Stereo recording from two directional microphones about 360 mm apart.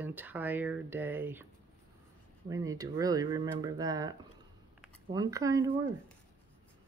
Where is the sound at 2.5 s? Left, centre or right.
Centre.